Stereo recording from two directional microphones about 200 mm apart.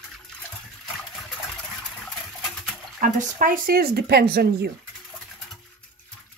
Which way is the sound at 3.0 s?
45° right (ahead or behind).